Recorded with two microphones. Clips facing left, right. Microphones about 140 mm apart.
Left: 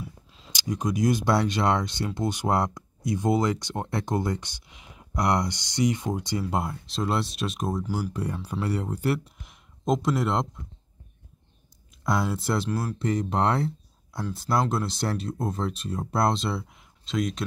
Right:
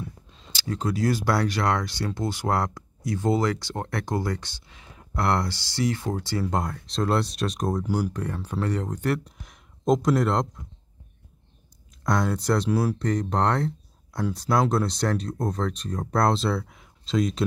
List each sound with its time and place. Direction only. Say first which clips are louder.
0.0 s a sound: right 2 dB; 5° left (ahead or behind)
0.5 s speech: even; 15° left (ahead or behind)
12.0 s speech: right 2 dB; 5° left (ahead or behind)